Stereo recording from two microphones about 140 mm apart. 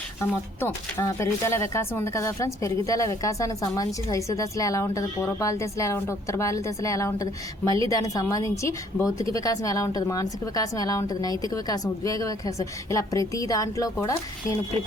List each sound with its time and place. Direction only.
0.2 s speech: 20° left (ahead or behind)